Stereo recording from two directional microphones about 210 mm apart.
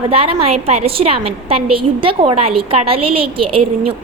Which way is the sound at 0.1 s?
30° right (ahead or behind).